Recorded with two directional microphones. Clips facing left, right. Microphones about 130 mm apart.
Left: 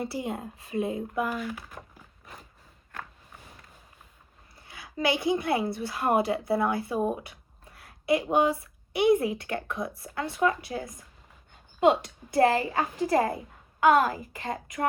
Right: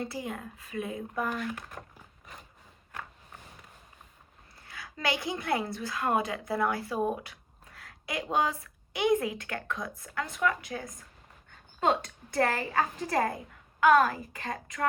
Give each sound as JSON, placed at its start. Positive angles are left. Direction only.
{"t": 0.0, "sound": "a woman's voice", "side_deg": 25}
{"t": 1.2, "sound": "speech", "side_deg": 5}
{"t": 4.6, "sound": "a woman's voice", "side_deg": 25}
{"t": 12.0, "sound": "a woman's voice", "side_deg": 25}